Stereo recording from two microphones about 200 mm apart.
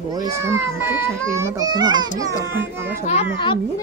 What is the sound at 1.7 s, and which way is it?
Speech, 20° right (ahead or behind).